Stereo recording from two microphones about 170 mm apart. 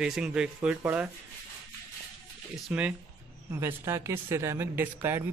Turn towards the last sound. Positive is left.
turn(degrees=-15)  # may be behind; listen again after turning